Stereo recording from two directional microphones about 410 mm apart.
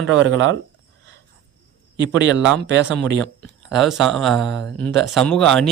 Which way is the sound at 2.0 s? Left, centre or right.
Right.